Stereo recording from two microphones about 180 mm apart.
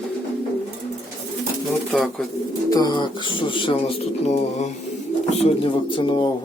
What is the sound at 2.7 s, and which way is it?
Speech, 20° left (ahead or behind).